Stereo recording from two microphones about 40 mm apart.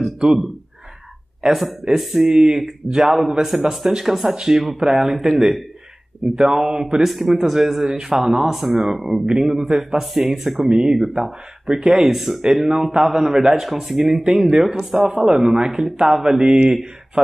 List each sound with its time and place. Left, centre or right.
0.2 s a man's voice: centre
10.7 s a man's voice: centre
11.0 s a man's voice: centre